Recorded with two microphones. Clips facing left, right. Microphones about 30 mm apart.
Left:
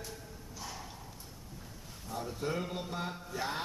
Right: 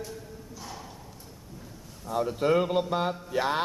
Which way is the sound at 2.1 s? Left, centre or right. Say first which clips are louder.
Right 12 dB; right.